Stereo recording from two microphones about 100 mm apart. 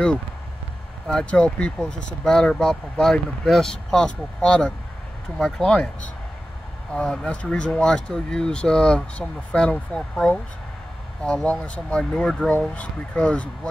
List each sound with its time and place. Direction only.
1.0 s speech: 10° left (ahead or behind)